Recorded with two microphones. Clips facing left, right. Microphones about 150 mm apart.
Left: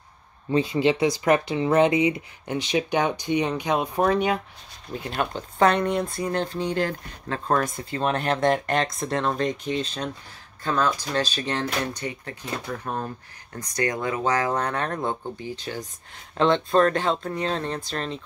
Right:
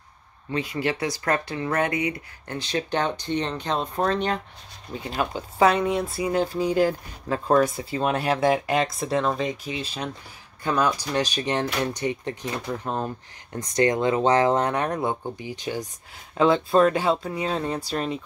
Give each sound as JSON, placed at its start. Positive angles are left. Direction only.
{"t": 0.5, "sound": "speech", "side_deg": 25}
{"t": 4.9, "sound": "speech", "side_deg": 0}